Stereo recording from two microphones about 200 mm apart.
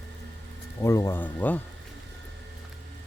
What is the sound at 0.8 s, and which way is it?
Speech, 15° left (ahead or behind).